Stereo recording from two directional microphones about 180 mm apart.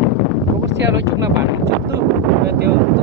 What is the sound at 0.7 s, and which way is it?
Speech, 80° right.